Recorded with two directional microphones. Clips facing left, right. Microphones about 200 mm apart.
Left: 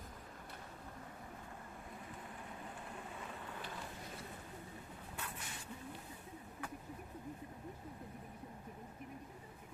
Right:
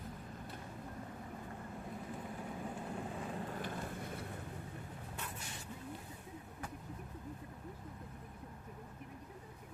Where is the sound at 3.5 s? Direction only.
50° right (ahead or behind).